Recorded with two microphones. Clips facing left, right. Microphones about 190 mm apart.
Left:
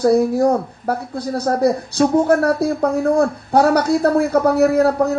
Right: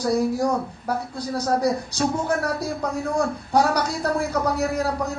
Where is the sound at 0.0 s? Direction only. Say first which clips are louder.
Left 7 dB; 60° left (ahead or behind).